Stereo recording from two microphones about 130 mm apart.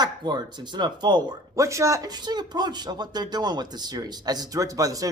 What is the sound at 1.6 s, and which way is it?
Speech, 25° right (ahead or behind).